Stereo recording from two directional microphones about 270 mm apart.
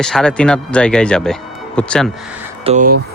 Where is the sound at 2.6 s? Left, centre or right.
Right.